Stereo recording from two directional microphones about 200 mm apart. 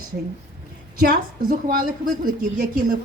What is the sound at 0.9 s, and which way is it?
A woman's voice, 45° right (ahead or behind).